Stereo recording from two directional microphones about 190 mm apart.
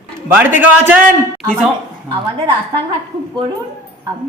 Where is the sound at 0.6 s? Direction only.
10° right (ahead or behind).